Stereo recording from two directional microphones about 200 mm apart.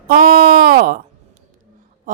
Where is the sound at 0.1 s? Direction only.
45° right (ahead or behind).